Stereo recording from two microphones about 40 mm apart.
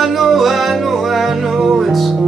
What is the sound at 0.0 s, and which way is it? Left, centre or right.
Music, centre.